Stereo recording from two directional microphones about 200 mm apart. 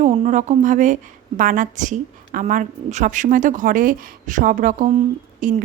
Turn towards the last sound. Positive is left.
turn(degrees=-40)  # may be behind; listen again after turning